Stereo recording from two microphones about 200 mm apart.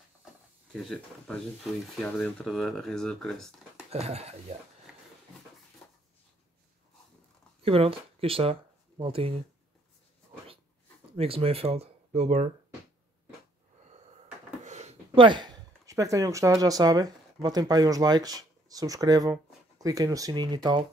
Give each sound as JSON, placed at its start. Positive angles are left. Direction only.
{"t": 0.7, "sound": "speech", "side_deg": 0}
{"t": 3.9, "sound": "speech", "side_deg": -30}
{"t": 7.6, "sound": "speech", "side_deg": -30}
{"t": 11.1, "sound": "speech", "side_deg": -30}
{"t": 14.6, "sound": "speech", "side_deg": -35}